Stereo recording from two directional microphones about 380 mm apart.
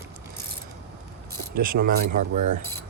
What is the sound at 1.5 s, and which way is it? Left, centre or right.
Speech, right.